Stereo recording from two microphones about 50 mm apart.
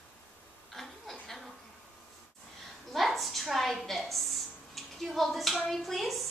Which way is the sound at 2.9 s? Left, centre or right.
Centre.